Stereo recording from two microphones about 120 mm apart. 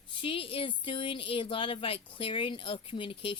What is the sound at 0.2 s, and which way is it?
Speech, 50° left (ahead or behind).